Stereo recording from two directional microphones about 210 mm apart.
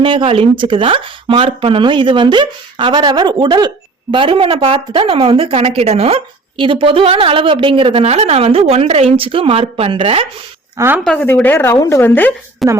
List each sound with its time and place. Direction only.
0.0 s speech: 25° right (ahead or behind)
10.8 s speech: 10° right (ahead or behind)
11.0 s a woman's voice: 5° left (ahead or behind)